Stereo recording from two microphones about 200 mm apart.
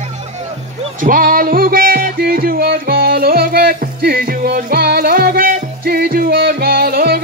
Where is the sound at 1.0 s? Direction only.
45° right (ahead or behind).